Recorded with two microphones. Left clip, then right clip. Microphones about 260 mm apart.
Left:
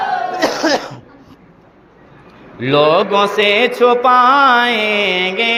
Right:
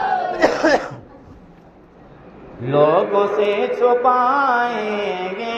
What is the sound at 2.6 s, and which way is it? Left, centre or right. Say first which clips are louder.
Mantra: left 3 dB; left.